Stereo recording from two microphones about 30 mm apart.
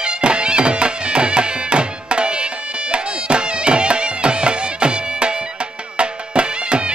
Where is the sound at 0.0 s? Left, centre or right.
Right.